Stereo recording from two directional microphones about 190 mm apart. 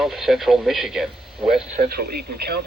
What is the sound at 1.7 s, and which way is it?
Speech, 55° right (ahead or behind).